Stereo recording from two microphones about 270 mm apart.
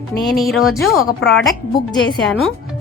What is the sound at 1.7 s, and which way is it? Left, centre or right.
Speech, centre.